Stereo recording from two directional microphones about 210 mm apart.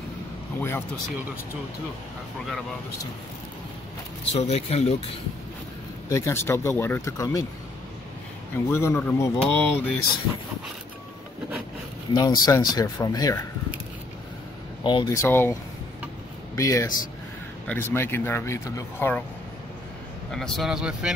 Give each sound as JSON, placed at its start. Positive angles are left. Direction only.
{"t": 0.6, "sound": "a sound", "side_deg": 10}
{"t": 4.3, "sound": "speech", "side_deg": 30}
{"t": 6.0, "sound": "speech", "side_deg": 15}
{"t": 8.6, "sound": "speech", "side_deg": 10}
{"t": 12.1, "sound": "speech", "side_deg": 20}
{"t": 14.8, "sound": "speech", "side_deg": 20}
{"t": 20.2, "sound": "speech", "side_deg": 0}